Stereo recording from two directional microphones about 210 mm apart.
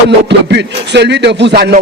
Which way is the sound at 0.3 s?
55° right (ahead or behind).